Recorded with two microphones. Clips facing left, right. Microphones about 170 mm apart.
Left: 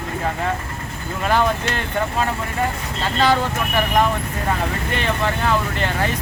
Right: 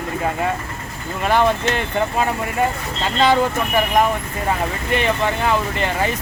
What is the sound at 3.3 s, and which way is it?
Speech, 10° right (ahead or behind).